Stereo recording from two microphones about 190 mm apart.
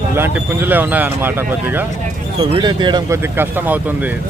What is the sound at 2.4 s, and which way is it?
Speech, 25° right (ahead or behind).